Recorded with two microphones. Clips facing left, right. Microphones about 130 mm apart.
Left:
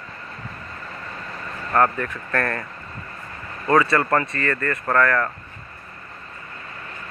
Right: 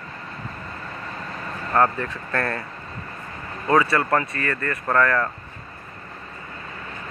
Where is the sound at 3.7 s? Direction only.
10° right (ahead or behind).